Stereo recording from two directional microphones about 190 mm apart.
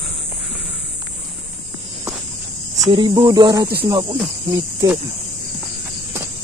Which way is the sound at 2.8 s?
20° right (ahead or behind).